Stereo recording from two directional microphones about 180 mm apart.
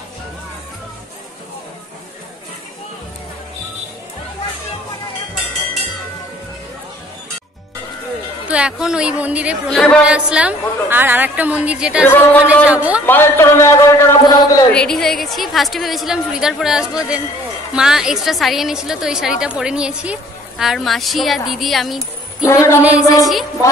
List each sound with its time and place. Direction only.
8.5 s a woman's voice: 5° right (ahead or behind)
12.1 s a man's voice: 10° left (ahead or behind)
12.6 s a woman's voice: 5° right (ahead or behind)
13.0 s a man's voice: 10° left (ahead or behind)
14.7 s a woman's voice: 5° left (ahead or behind)
22.4 s a man's voice: 15° left (ahead or behind)
22.8 s a woman's voice: 5° right (ahead or behind)